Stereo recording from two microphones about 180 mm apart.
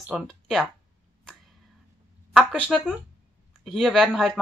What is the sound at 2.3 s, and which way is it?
Speech, 5° right (ahead or behind).